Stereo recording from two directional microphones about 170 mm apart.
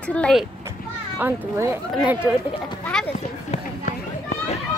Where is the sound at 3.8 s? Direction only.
45° left (ahead or behind).